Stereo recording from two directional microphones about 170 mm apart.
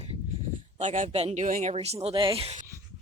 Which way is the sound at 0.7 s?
45° right (ahead or behind).